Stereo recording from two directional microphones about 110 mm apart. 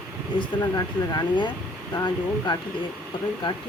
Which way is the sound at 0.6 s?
35° left (ahead or behind).